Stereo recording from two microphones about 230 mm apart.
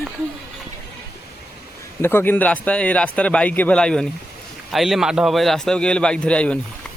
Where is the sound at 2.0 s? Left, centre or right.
Centre.